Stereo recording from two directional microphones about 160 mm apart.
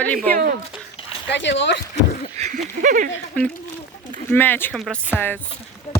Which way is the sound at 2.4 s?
50° right (ahead or behind).